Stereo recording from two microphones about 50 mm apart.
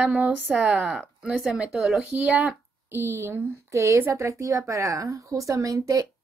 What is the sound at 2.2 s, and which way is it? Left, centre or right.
Speech, right.